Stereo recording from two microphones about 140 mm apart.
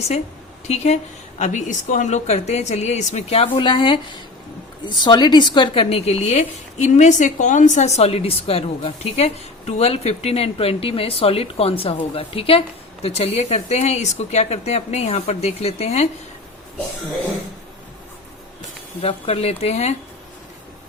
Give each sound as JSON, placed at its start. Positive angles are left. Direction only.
{"t": 0.7, "sound": "a woman's voice", "side_deg": 55}
{"t": 19.0, "sound": "a woman's voice", "side_deg": 45}